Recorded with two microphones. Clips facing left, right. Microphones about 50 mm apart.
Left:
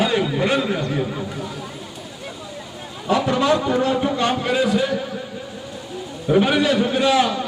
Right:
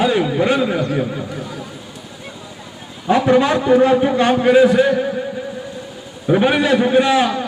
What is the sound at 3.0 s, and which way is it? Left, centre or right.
A man's voice, right.